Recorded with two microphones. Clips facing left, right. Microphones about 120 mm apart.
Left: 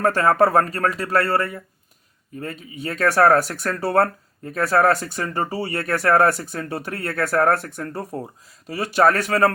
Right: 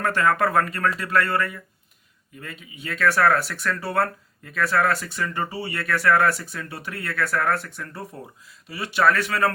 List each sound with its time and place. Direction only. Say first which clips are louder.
0.0 s speech: left 4 dB; 35° left (ahead or behind)